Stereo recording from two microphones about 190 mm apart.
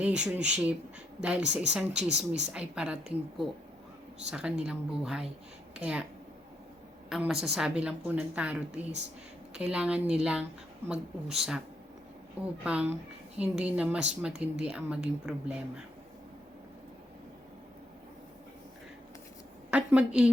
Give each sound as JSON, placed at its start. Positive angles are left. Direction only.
{"t": 0.0, "sound": "a woman's voice", "side_deg": -5}
{"t": 2.0, "sound": "speech", "side_deg": -65}
{"t": 2.5, "sound": "a woman's voice", "side_deg": -5}
{"t": 7.1, "sound": "a woman's voice", "side_deg": 0}
{"t": 12.6, "sound": "a woman's voice", "side_deg": -5}
{"t": 19.7, "sound": "a woman's voice", "side_deg": -5}